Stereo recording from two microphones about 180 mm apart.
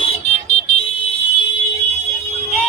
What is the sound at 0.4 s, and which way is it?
Car alarm, 35° left (ahead or behind).